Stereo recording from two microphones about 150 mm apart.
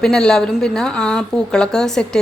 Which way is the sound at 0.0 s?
5° left (ahead or behind).